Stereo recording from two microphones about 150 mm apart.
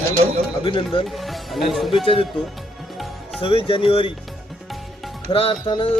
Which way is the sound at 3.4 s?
35° left (ahead or behind).